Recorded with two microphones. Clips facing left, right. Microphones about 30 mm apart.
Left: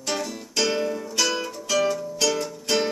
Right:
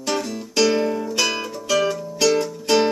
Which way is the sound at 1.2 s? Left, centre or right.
Right.